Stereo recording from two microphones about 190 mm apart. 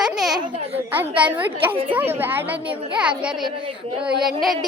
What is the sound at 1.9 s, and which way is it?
A woman's voice, 10° right (ahead or behind).